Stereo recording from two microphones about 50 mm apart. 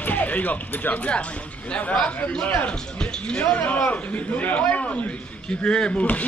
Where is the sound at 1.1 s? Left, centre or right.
Left.